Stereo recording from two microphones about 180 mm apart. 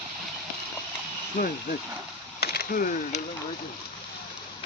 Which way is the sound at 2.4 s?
60° left (ahead or behind).